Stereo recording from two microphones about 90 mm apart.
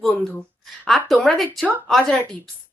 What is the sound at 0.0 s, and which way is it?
Speech, 5° left (ahead or behind).